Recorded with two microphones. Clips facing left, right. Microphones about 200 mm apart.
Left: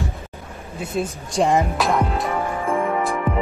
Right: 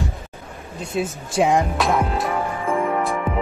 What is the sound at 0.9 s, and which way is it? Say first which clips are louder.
Speech: right 1 dB; centre (ahead or behind).